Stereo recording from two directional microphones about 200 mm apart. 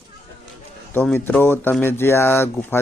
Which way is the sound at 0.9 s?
10° left (ahead or behind).